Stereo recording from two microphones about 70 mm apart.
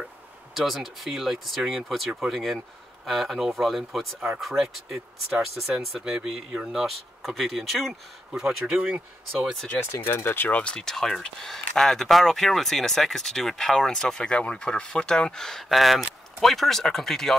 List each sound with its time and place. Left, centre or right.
0.6 s speech: centre
8.7 s speech: right
9.9 s speech: left
10.6 s speech: centre